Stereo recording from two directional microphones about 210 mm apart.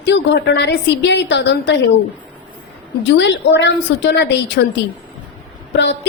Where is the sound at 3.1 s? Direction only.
55° left (ahead or behind).